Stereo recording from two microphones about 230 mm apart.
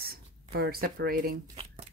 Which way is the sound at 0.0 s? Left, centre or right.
Right.